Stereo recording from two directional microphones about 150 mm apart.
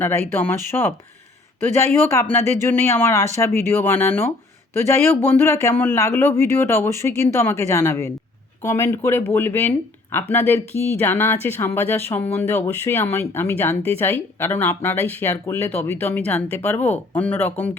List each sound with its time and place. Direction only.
0.0 s speech: 15° left (ahead or behind)
5.4 s speech: 15° left (ahead or behind)